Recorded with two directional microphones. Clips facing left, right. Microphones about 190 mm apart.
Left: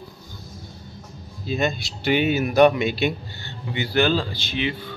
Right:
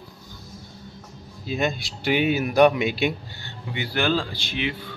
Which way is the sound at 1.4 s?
5° right (ahead or behind).